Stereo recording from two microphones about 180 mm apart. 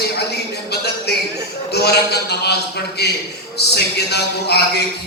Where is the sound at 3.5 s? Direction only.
65° left (ahead or behind).